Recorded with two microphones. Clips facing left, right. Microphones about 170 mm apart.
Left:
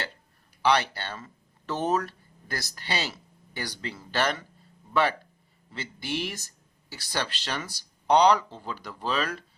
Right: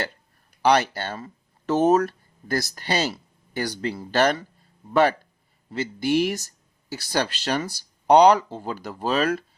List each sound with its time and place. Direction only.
0.6 s speech: 45° right (ahead or behind)
5.7 s speech: 40° right (ahead or behind)